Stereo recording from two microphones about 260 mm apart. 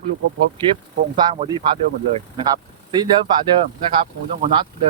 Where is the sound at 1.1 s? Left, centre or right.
Centre.